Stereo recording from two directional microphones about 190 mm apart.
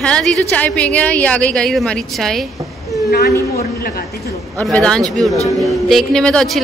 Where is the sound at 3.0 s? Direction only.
55° left (ahead or behind).